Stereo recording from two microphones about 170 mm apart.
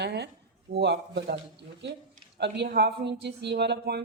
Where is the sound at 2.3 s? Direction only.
85° right.